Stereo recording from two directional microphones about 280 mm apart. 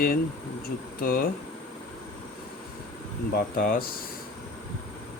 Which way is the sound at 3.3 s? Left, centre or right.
Left.